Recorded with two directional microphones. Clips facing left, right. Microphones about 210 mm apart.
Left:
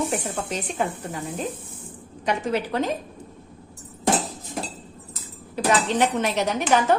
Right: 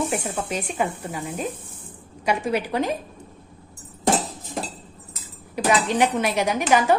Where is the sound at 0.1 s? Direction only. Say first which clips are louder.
Right 1 dB; 10° right (ahead or behind).